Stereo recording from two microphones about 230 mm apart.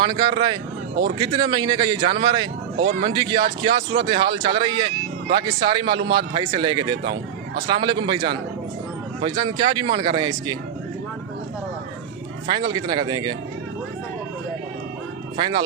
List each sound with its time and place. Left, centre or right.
0.0 s speech: centre
7.0 s speech: right
7.7 s speech: centre
12.5 s speech: centre
15.4 s speech: centre